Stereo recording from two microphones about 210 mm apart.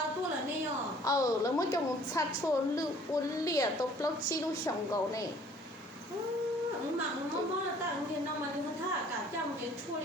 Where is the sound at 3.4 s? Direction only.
15° left (ahead or behind).